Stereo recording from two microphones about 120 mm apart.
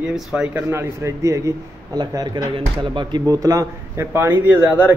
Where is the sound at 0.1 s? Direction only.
5° right (ahead or behind).